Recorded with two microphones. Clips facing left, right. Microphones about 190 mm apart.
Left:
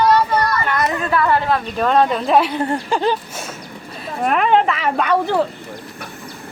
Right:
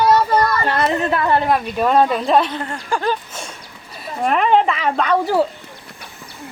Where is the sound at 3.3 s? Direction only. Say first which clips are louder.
Left 2 dB; 5° left (ahead or behind).